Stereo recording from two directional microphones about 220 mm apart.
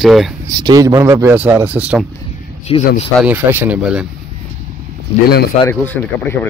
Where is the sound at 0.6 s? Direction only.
15° right (ahead or behind).